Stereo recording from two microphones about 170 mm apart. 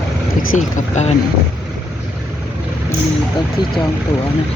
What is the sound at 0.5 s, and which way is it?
Speech, 40° left (ahead or behind).